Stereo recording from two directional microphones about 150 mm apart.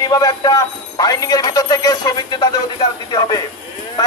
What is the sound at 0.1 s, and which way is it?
Speech, 25° left (ahead or behind).